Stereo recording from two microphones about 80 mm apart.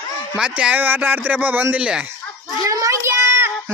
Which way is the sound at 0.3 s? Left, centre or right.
Centre.